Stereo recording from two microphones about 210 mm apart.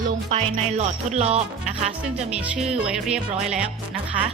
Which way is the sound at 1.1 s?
30° right (ahead or behind).